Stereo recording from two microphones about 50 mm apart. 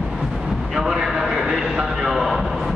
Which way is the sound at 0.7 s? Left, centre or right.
Centre.